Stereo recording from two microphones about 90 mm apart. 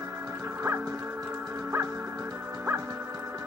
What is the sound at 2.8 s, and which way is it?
Music, 45° right (ahead or behind).